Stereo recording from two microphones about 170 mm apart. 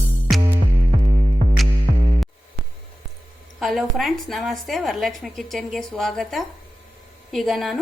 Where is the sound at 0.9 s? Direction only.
45° right (ahead or behind).